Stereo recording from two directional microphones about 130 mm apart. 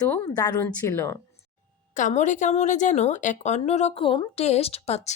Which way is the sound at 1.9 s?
70° left (ahead or behind).